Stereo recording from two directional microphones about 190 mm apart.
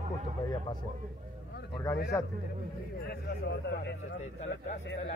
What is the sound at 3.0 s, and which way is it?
Speech, 60° left (ahead or behind).